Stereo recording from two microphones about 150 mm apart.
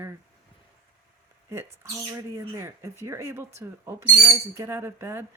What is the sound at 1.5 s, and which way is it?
Speech, 20° right (ahead or behind).